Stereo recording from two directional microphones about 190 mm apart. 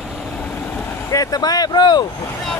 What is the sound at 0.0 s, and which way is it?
Vehicle, centre (ahead or behind).